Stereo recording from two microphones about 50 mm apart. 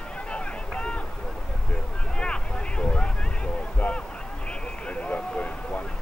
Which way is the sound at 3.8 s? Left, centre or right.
Left.